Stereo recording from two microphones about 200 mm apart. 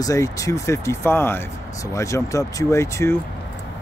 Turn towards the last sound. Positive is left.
turn(degrees=15)  # may be behind; listen again after turning